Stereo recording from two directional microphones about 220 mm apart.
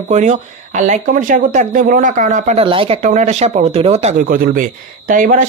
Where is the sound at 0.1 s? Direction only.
30° right (ahead or behind).